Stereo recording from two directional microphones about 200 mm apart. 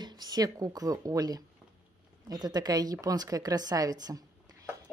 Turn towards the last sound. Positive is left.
turn(degrees=-20)  # may be behind; listen again after turning